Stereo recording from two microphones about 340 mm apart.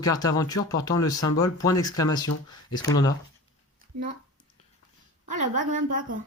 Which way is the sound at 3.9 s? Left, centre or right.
Right.